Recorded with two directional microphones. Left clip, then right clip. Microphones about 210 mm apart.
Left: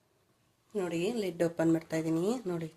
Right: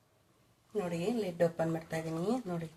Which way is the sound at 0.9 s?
45° left (ahead or behind).